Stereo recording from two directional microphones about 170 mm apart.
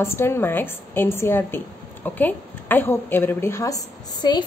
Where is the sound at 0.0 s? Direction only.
15° left (ahead or behind).